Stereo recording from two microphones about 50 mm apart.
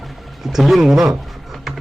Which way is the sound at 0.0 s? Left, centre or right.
Centre.